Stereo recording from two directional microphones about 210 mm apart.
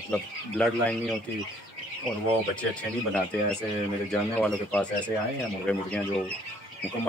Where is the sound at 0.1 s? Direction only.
5° left (ahead or behind).